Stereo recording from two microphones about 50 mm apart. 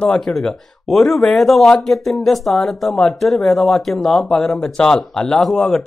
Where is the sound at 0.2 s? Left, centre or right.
Centre.